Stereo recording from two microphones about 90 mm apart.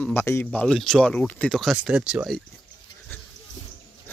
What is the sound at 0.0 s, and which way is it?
Speech, 25° left (ahead or behind).